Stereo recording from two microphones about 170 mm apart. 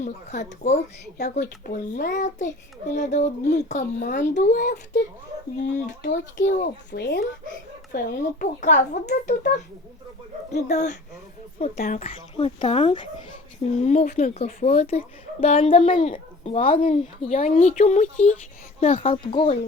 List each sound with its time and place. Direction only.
0.0 s a child's voice: 45° left (ahead or behind)
1.2 s speech: 75° left (ahead or behind)
1.7 s a child's voice: 50° left (ahead or behind)
6.1 s a child's voice: 50° left (ahead or behind)
6.9 s speech: 75° left (ahead or behind)
7.9 s a child's voice: 50° left (ahead or behind)
10.5 s a child's voice: 45° left (ahead or behind)
11.9 s speech: 35° left (ahead or behind)
15.8 s a child's voice: 50° left (ahead or behind); by 19.5 s 30° left (ahead or behind)